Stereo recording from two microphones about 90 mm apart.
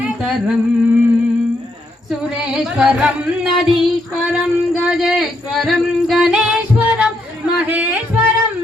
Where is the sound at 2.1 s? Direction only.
5° right (ahead or behind).